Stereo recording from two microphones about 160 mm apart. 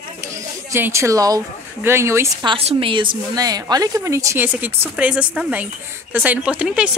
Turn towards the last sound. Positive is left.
turn(degrees=-5)  # may be behind; listen again after turning